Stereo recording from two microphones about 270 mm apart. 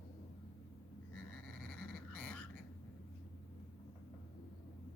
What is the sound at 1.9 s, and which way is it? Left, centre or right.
Frog, centre.